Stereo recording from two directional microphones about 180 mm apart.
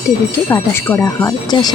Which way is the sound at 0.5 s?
10° left (ahead or behind).